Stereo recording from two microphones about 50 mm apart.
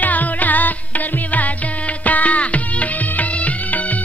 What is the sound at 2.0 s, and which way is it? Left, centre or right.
Music, left.